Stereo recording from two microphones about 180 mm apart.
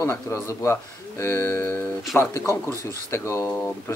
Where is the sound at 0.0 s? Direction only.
15° left (ahead or behind).